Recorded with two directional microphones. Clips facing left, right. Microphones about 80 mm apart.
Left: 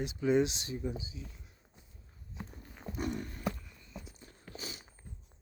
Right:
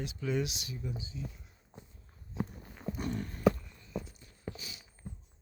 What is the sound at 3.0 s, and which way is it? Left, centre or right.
Horse, centre.